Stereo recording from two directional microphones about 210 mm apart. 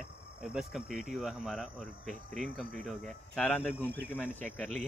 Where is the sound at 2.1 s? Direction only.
35° right (ahead or behind).